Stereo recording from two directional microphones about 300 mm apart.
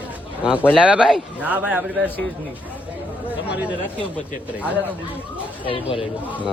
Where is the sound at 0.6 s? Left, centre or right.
Centre.